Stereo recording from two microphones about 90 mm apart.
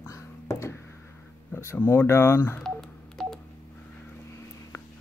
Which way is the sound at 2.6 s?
5° left (ahead or behind).